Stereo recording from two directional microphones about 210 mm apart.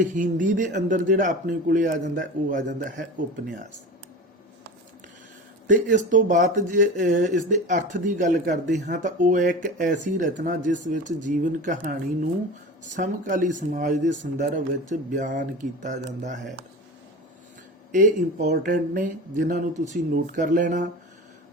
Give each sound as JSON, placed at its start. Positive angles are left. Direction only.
{"t": 0.1, "sound": "speech", "side_deg": -40}
{"t": 5.6, "sound": "speech", "side_deg": -35}
{"t": 17.9, "sound": "speech", "side_deg": -35}